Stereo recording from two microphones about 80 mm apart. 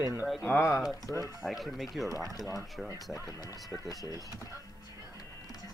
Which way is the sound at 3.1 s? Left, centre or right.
Left.